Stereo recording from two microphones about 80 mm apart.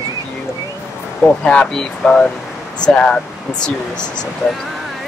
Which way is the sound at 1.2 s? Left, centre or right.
Centre.